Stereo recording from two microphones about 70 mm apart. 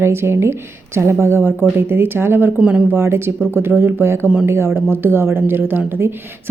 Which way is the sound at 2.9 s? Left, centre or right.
Right.